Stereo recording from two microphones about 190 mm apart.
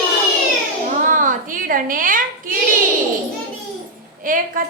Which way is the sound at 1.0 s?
45° right (ahead or behind).